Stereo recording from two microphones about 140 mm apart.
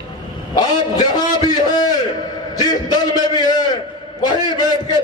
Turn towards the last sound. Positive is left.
turn(degrees=30)  # may be behind; listen again after turning